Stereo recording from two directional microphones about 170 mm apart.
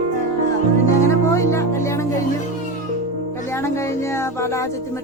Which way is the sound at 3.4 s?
15° left (ahead or behind).